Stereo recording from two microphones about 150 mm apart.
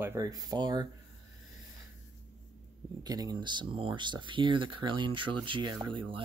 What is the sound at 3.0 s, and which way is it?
Speech, 25° right (ahead or behind).